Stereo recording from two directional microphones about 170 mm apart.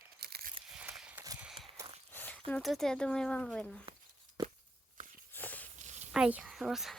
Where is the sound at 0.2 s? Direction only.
70° right (ahead or behind).